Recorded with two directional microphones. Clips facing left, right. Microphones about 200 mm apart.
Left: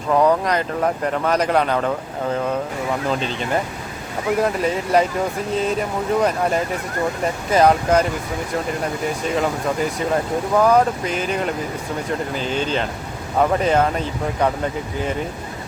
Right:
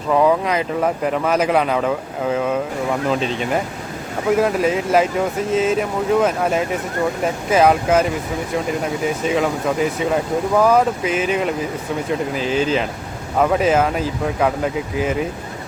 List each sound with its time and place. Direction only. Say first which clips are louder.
0.1 s speech: right 1 dB; 5° right (ahead or behind)
9.2 s speech: right 2 dB; centre (ahead or behind)